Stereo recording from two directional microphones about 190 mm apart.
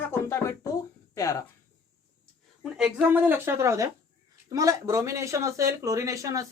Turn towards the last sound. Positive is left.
turn(degrees=-15)  # may be behind; listen again after turning